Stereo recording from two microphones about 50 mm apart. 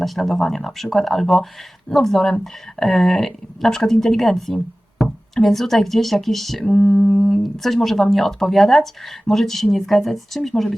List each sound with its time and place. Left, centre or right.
0.0 s speech: centre
6.7 s mantra: left
7.3 s speech: centre